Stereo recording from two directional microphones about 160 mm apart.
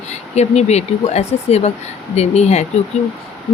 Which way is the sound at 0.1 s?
45° left (ahead or behind).